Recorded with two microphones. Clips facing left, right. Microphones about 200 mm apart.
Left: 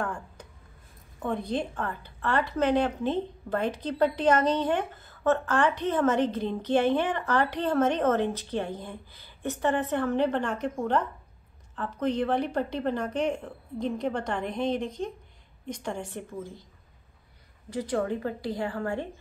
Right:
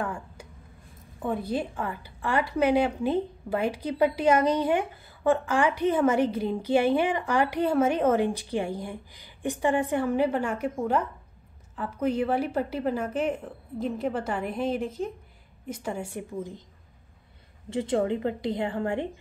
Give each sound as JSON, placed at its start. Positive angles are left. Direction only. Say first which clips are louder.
{"t": 0.0, "sound": "a sound", "louder": "right 1 dB", "side_deg": -10}
{"t": 1.2, "sound": "a woman's voice", "louder": "right 1 dB", "side_deg": -5}
{"t": 17.6, "sound": "a woman's voice", "louder": "right 3 dB", "side_deg": -25}